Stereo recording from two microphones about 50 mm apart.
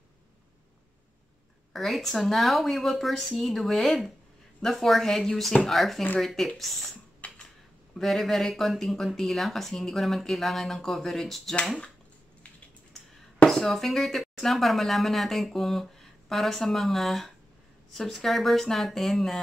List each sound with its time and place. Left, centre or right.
1.7 s speech: centre
7.2 s computer keyboard: left
8.0 s speech: centre
13.5 s speech: centre